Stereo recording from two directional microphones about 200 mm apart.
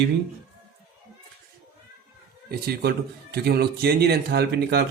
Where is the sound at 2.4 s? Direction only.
50° right (ahead or behind).